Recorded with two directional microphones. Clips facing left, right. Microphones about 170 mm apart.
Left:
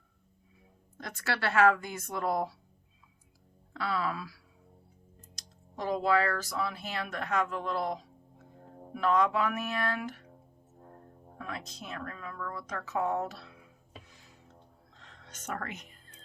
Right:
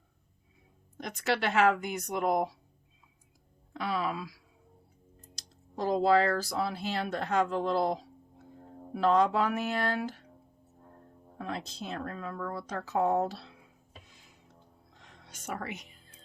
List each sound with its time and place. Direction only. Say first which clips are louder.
0.9 s speech: right 4 dB; 20° right (ahead or behind)
3.7 s speech: right 1 dB; 15° right (ahead or behind)
5.3 s speech: right 6 dB; 35° right (ahead or behind)
11.3 s speech: right 4 dB; 30° right (ahead or behind)
14.9 s music: left 1 dB; 15° right (ahead or behind)